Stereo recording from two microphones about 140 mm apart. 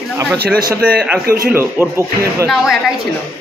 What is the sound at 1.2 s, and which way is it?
Speech, 90° right.